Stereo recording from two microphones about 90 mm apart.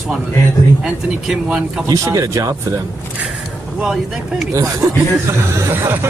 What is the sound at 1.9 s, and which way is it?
Speech, 40° right (ahead or behind).